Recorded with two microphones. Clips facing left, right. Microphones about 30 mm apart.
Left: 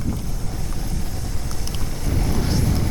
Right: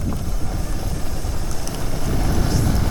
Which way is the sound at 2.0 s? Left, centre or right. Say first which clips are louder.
Right 1 dB; centre.